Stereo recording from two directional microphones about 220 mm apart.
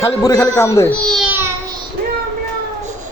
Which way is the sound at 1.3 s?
10° right (ahead or behind).